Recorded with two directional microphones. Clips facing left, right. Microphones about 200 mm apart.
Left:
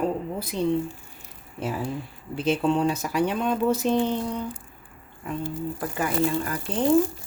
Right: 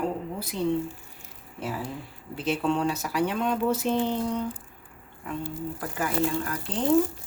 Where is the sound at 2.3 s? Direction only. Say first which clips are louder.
Left 3 dB; 20° left (ahead or behind).